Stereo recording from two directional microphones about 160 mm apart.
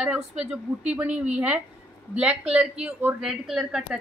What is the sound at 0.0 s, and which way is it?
A woman's voice, 5° right (ahead or behind).